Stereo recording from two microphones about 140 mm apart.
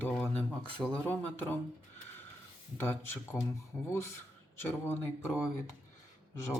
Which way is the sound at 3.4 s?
5° left (ahead or behind).